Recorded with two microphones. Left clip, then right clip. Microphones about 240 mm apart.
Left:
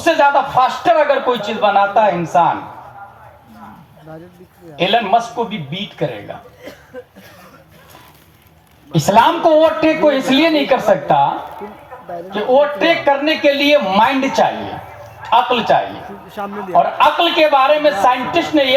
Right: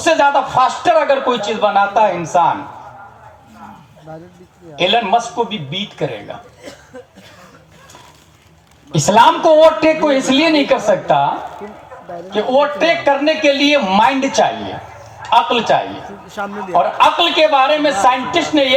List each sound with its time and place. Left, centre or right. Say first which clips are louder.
0.0 s a man's voice: even; right
4.8 s a man's voice: even; right
6.9 s cough: left 5 dB; centre
8.9 s a man's voice: right 2 dB; right
12.3 s a man's voice: left 1 dB; right
15.7 s a man's voice: left 1 dB; right
16.3 s speech: right 1 dB; centre
16.7 s a man's voice: even; right